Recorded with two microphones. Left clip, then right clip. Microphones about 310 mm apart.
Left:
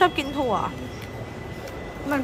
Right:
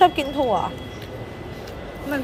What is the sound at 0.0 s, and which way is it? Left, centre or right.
Speech, centre.